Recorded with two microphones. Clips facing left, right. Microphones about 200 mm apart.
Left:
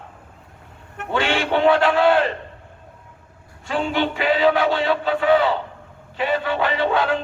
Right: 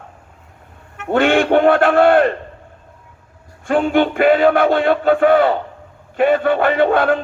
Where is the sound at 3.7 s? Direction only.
50° right (ahead or behind).